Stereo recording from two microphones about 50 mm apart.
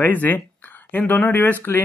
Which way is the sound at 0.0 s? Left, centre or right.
Left.